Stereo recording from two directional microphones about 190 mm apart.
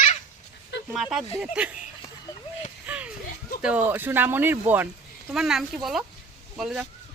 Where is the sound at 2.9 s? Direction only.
10° right (ahead or behind).